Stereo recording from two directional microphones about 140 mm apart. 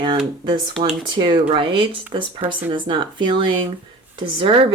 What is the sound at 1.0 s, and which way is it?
Speech, 35° right (ahead or behind).